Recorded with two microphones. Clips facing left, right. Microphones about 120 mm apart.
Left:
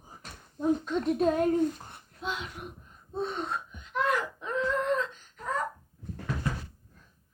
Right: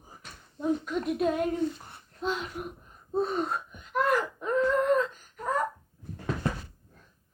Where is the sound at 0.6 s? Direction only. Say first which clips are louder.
Left 1 dB; 30° left (ahead or behind); by 1.8 s 45° left (ahead or behind).